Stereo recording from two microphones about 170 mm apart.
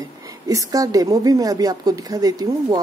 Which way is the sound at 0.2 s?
20° right (ahead or behind).